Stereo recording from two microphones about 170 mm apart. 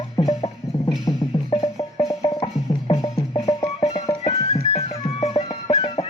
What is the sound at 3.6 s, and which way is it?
Music, 40° left (ahead or behind).